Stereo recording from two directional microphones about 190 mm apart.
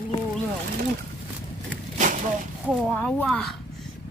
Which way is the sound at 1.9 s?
40° right (ahead or behind).